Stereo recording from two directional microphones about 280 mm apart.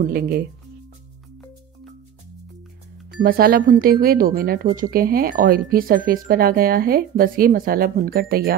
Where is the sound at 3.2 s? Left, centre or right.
Right.